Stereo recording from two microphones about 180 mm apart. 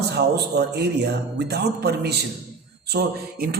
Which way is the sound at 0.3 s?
65° right (ahead or behind).